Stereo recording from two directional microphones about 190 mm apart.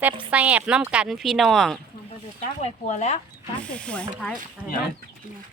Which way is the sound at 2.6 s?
35° left (ahead or behind).